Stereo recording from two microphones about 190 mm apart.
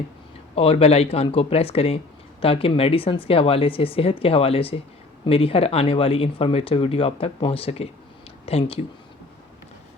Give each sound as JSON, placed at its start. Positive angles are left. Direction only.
{"t": 0.5, "sound": "speech", "side_deg": 30}